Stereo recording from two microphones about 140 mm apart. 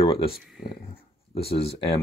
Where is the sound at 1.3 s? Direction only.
45° left (ahead or behind).